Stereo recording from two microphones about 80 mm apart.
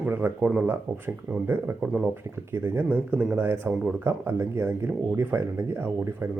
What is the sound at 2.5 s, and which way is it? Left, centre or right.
Speech, right.